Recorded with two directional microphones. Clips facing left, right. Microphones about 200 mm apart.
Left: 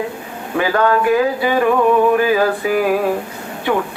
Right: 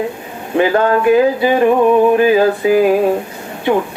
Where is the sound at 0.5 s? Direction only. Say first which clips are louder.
Right 3 dB; 25° right (ahead or behind).